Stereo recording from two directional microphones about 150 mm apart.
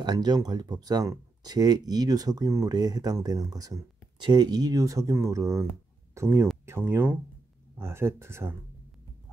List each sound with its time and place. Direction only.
0.0 s speech: 25° right (ahead or behind)